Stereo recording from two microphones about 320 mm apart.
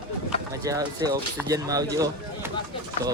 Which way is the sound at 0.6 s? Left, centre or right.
Centre.